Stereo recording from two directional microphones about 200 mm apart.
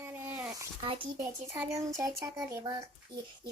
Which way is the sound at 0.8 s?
25° right (ahead or behind).